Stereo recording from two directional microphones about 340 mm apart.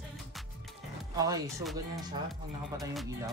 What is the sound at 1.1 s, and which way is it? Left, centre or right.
Speech, centre.